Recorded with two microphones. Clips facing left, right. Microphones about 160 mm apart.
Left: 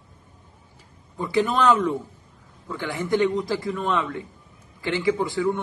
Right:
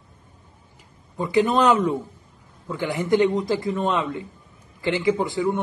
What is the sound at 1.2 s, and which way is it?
A man's voice, 20° right (ahead or behind).